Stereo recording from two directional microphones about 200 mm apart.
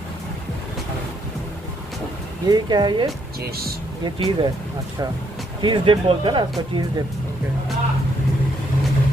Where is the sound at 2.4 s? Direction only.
20° right (ahead or behind).